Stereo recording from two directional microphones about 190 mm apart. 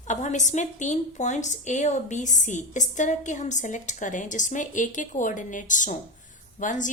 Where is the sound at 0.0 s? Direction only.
40° left (ahead or behind).